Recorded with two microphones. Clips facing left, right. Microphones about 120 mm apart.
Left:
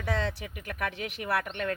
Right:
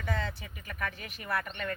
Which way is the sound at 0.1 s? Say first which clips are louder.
Left 5 dB; 80° left.